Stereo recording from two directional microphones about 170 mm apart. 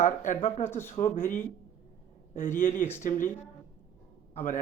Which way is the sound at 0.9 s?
50° left (ahead or behind).